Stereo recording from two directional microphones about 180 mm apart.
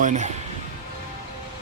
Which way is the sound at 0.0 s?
40° right (ahead or behind).